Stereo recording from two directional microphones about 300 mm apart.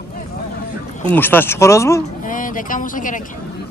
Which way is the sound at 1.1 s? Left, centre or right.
Centre.